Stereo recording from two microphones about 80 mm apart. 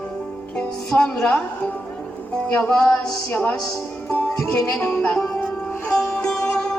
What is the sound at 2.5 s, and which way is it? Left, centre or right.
Speech, centre.